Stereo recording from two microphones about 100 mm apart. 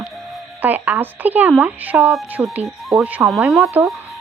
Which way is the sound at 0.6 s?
20° right (ahead or behind).